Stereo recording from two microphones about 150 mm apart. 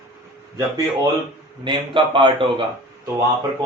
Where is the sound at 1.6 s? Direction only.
35° right (ahead or behind).